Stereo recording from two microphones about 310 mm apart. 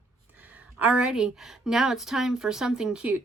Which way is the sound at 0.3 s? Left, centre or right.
Centre.